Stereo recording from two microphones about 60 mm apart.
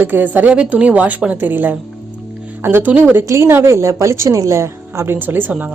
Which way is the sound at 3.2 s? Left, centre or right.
Right.